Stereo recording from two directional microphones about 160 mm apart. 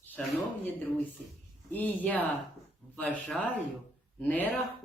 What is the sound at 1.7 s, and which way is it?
Speech, 10° left (ahead or behind).